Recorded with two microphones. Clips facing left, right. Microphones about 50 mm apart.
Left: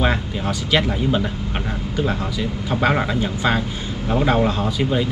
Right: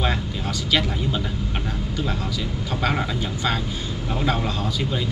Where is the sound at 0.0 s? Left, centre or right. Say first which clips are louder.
Left 4 dB; centre.